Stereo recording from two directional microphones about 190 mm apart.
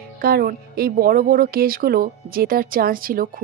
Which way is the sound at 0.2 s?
55° right (ahead or behind).